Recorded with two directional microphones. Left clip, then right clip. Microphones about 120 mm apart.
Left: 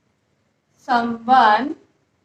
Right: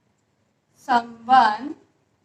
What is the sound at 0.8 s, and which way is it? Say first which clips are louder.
A woman's voice: left 2 dB; 25° left (ahead or behind).